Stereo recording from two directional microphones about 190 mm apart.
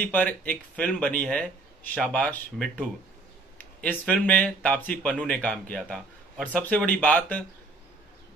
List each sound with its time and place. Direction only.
0.0 s speech: 10° left (ahead or behind)